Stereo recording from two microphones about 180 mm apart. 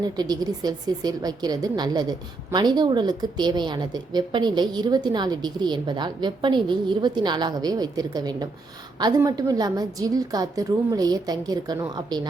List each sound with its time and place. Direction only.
0.0 s a woman's voice: 20° right (ahead or behind)